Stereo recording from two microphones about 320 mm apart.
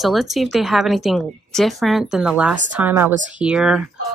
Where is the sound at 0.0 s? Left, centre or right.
Centre.